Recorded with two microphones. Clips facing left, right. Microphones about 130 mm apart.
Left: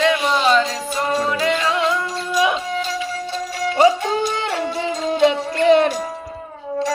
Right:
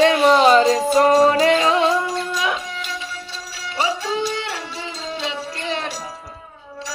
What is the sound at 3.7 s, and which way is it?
Music, 45° left (ahead or behind).